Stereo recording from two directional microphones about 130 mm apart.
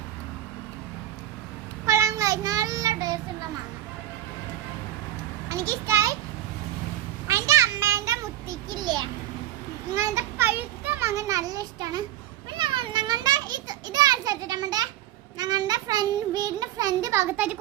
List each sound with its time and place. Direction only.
1.9 s child singing: 25° right (ahead or behind)
5.5 s a child's voice: 20° right (ahead or behind)
7.3 s a sound: 20° right (ahead or behind)
8.7 s child singing: 35° right (ahead or behind)
9.9 s a child's voice: 20° right (ahead or behind)
12.5 s children playing: 40° right (ahead or behind)
15.4 s child singing: 30° right (ahead or behind); by 17.6 s 15° right (ahead or behind)